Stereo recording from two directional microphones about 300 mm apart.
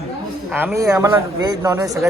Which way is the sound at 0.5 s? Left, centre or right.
Centre.